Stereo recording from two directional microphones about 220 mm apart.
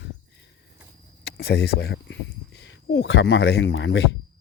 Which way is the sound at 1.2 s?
45° left (ahead or behind).